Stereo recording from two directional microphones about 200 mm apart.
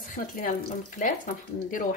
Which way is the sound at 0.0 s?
40° left (ahead or behind).